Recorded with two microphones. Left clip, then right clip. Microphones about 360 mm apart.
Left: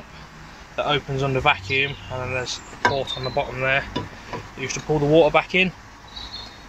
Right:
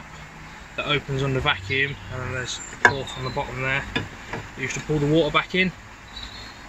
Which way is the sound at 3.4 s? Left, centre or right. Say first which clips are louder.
Left 4 dB; centre.